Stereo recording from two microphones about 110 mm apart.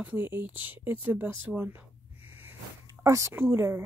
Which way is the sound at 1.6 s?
15° right (ahead or behind).